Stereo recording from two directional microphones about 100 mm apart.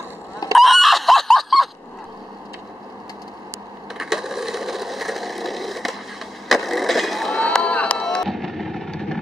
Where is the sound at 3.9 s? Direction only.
5° right (ahead or behind).